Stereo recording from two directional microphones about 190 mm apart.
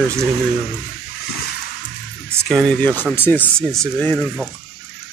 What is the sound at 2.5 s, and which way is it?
Speech, 5° left (ahead or behind).